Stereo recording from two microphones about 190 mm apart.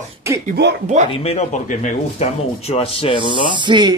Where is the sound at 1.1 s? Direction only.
35° left (ahead or behind).